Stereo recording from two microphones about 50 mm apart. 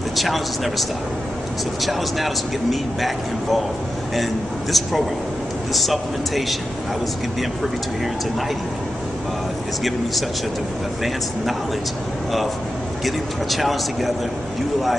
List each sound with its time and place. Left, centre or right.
0.1 s a man's voice: centre
4.7 s a man's voice: centre
13.0 s a man's voice: centre